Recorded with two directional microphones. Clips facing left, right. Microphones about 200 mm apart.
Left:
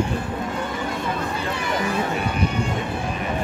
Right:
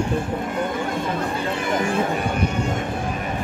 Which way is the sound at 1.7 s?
50° right (ahead or behind).